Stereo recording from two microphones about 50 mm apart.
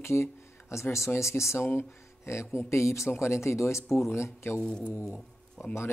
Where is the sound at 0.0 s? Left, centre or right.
Left.